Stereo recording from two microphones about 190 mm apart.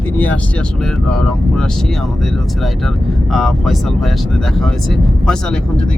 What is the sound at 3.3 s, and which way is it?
Speech, centre (ahead or behind).